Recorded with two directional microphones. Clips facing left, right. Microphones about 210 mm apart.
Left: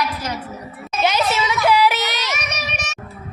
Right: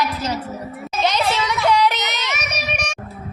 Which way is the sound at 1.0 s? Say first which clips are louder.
Left 1 dB; 5° left (ahead or behind).